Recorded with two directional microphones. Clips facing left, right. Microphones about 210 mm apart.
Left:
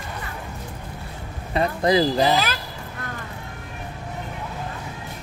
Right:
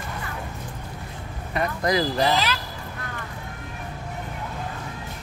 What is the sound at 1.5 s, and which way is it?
Speech, 25° left (ahead or behind).